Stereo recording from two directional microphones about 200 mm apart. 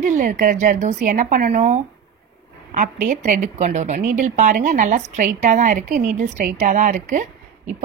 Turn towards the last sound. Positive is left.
turn(degrees=-40)  # may be behind; listen again after turning